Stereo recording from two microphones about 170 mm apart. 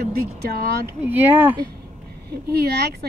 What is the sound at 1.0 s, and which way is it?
Speech, 10° right (ahead or behind).